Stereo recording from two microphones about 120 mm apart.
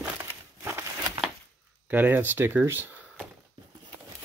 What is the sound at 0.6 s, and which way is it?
Crumpling, 20° right (ahead or behind).